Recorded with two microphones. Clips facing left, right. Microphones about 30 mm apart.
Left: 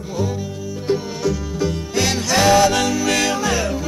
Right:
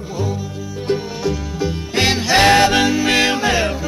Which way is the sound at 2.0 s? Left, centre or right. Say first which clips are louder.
Right 4 dB; right.